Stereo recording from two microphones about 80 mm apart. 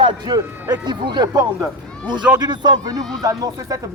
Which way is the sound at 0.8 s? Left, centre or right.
Right.